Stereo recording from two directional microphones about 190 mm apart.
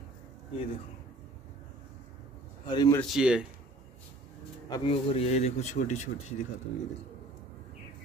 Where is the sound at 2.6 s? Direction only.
20° left (ahead or behind).